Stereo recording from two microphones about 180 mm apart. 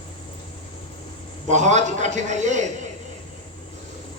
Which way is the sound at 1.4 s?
40° right (ahead or behind).